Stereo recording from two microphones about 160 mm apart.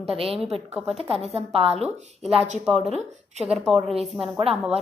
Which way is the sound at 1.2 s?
40° right (ahead or behind).